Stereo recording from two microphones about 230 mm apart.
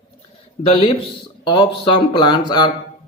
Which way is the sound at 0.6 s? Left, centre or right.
Left.